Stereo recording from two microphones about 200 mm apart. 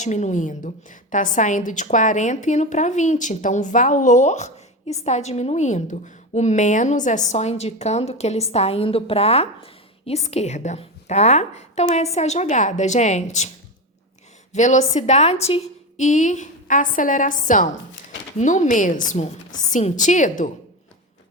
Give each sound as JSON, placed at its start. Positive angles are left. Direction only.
{"t": 0.0, "sound": "a woman's voice", "side_deg": 35}
{"t": 14.5, "sound": "a woman's voice", "side_deg": 40}